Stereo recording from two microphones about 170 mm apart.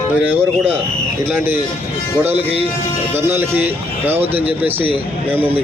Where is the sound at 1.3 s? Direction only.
15° right (ahead or behind).